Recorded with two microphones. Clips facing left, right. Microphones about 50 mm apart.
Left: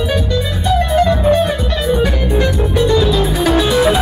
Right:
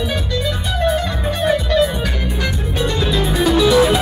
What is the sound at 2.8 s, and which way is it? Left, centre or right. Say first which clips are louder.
Music: left 6 dB; right.